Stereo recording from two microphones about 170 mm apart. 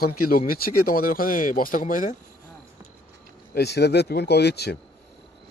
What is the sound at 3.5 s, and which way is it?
Speech, 75° left (ahead or behind).